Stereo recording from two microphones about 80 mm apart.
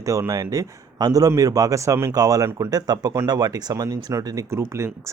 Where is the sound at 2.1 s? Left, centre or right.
Right.